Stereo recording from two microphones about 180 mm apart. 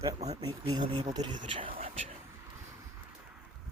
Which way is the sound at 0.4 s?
25° right (ahead or behind).